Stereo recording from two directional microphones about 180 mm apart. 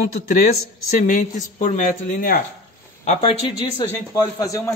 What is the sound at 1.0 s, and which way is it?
A man's voice, 45° left (ahead or behind).